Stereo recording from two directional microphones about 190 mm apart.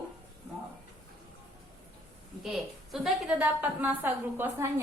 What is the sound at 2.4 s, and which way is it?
A woman's voice, centre (ahead or behind).